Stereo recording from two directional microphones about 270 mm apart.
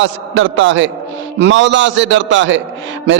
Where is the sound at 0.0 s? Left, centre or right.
Right.